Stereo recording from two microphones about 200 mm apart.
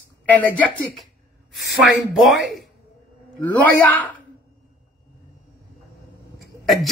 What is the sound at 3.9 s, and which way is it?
Speech, 10° left (ahead or behind).